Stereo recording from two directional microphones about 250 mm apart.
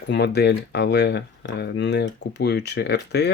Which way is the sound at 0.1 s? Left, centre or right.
Left.